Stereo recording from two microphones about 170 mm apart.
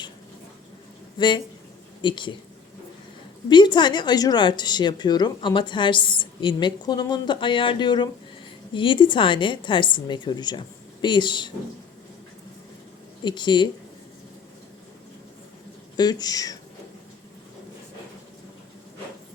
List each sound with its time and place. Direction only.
1.2 s a woman's voice: 25° left (ahead or behind)
3.5 s a woman's voice: 25° left (ahead or behind)
13.2 s a woman's voice: 25° left (ahead or behind)
16.0 s a woman's voice: 25° left (ahead or behind)